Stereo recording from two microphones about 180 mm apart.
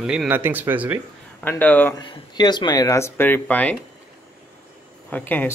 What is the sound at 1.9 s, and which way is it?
Speech, 25° left (ahead or behind).